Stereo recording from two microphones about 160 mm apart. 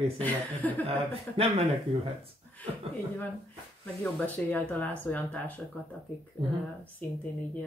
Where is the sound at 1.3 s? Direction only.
35° right (ahead or behind).